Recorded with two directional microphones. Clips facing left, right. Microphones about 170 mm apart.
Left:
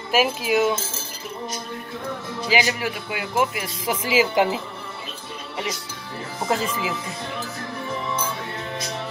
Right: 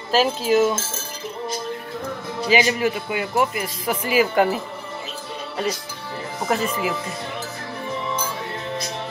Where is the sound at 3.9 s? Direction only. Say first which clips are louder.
Right 1 dB; 90° left.